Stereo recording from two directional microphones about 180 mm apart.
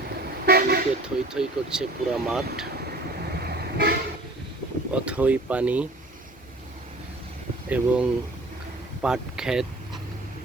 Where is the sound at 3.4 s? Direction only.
65° right (ahead or behind).